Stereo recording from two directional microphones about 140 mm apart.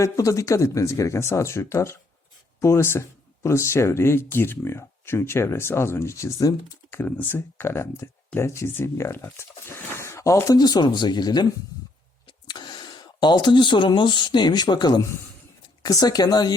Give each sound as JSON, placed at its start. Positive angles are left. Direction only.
{"t": 0.0, "sound": "speech", "side_deg": 25}